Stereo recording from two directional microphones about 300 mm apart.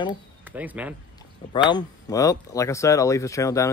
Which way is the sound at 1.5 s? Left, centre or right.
Centre.